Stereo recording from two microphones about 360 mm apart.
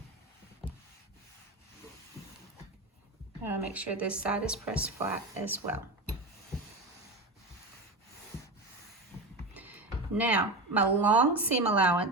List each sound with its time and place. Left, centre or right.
3.4 s a woman's voice: centre
9.6 s speech: centre